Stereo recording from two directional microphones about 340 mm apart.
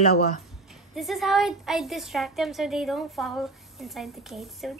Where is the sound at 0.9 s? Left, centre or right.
Centre.